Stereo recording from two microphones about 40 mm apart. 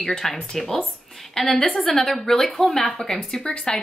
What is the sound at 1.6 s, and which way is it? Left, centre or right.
A woman's voice, centre.